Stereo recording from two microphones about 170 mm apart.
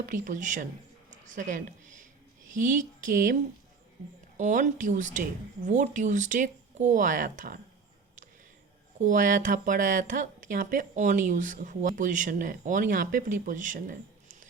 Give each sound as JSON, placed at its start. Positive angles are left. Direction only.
{"t": 0.0, "sound": "speech", "side_deg": -50}
{"t": 1.1, "sound": "a sound", "side_deg": -45}
{"t": 2.5, "sound": "speech", "side_deg": -50}
{"t": 4.4, "sound": "speech", "side_deg": -45}
{"t": 9.0, "sound": "speech", "side_deg": -50}